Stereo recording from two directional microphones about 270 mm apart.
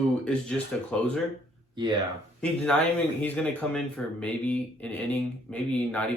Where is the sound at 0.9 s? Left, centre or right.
Centre.